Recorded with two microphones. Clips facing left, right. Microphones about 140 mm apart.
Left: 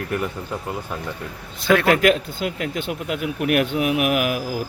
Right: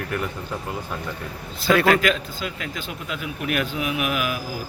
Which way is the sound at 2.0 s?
55° left (ahead or behind).